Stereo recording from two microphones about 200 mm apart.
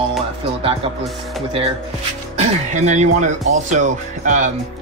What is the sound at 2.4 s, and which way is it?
Speech, 35° right (ahead or behind).